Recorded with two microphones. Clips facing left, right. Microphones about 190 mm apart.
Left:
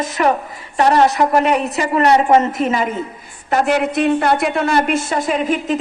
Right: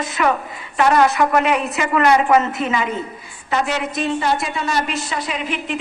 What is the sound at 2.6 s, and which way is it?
Speech, 45° left (ahead or behind).